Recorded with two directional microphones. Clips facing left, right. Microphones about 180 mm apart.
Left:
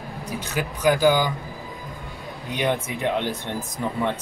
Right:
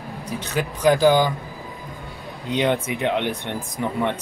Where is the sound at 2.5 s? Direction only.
20° right (ahead or behind).